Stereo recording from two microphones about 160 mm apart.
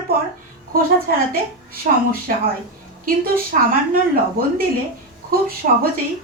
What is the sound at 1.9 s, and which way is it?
Speech, 60° right (ahead or behind).